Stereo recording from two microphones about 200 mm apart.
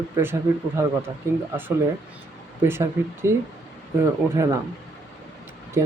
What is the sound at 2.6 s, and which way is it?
Speech, 15° right (ahead or behind).